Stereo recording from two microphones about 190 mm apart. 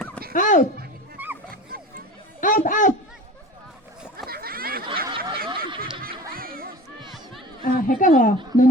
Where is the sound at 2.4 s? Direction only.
45° left (ahead or behind).